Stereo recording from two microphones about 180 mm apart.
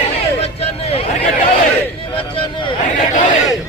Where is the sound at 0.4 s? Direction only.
35° left (ahead or behind).